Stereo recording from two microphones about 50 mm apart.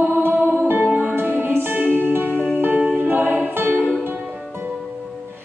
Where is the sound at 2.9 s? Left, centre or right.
Right.